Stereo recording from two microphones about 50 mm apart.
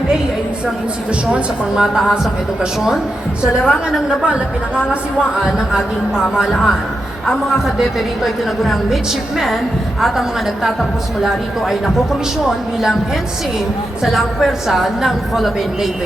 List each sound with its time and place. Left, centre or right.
1.3 s a woman's voice: centre
14.0 s a woman's voice: centre